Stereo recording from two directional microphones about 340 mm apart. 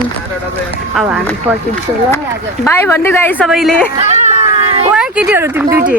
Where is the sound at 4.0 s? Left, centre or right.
Centre.